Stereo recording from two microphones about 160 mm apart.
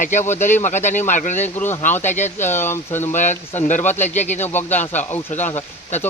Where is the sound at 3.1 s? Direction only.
50° left (ahead or behind).